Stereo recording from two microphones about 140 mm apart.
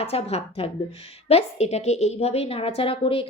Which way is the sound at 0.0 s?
45° left (ahead or behind).